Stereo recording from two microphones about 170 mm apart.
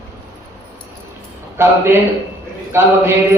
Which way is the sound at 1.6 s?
15° right (ahead or behind).